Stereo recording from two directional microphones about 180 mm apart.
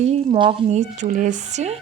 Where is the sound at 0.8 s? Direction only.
45° right (ahead or behind).